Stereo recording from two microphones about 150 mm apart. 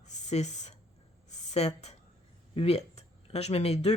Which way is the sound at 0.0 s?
50° left (ahead or behind).